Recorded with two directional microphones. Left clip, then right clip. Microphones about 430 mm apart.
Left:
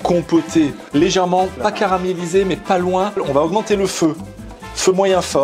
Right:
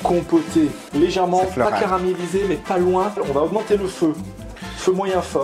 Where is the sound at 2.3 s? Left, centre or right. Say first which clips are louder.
Left 6 dB; left.